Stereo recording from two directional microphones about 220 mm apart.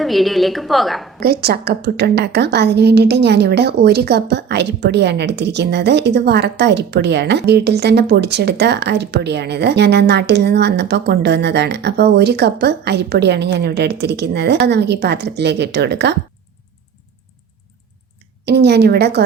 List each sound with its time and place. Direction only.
0.0 s a woman's voice: centre (ahead or behind)
1.2 s a woman's voice: 45° right (ahead or behind)
18.4 s a woman's voice: 50° right (ahead or behind)